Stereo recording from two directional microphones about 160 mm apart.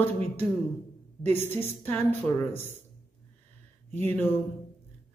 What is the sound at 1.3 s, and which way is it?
A woman's voice, 15° left (ahead or behind).